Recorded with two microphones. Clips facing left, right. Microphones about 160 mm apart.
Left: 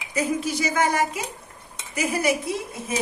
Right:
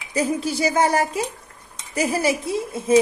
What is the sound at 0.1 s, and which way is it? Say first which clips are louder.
Speech: right 2 dB; 30° right (ahead or behind).